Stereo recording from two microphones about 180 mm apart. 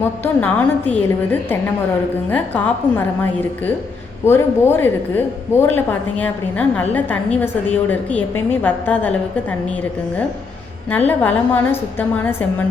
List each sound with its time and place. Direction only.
0.0 s a woman's voice: 10° left (ahead or behind)
4.3 s a woman's voice: 10° left (ahead or behind)
8.6 s a woman's voice: 10° left (ahead or behind)
10.9 s a woman's voice: 10° left (ahead or behind)